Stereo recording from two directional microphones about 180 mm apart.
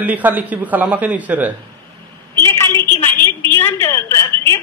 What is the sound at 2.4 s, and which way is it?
A woman's voice, 15° left (ahead or behind).